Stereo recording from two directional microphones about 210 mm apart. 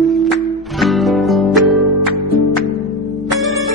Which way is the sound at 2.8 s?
Centre (ahead or behind).